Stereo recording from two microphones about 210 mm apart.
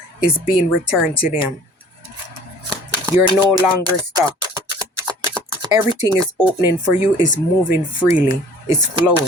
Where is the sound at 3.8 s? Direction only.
20° right (ahead or behind).